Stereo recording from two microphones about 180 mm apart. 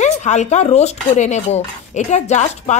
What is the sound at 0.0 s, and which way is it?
Speech, 40° left (ahead or behind).